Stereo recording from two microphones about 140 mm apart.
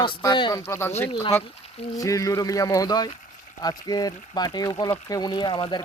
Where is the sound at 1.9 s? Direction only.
25° left (ahead or behind).